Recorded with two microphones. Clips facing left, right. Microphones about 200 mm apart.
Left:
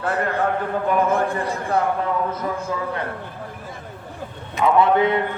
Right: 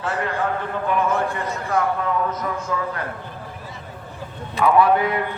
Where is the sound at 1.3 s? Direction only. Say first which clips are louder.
Left 2 dB; 35° left (ahead or behind).